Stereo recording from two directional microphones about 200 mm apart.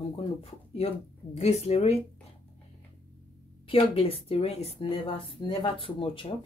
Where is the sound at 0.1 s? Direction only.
30° left (ahead or behind).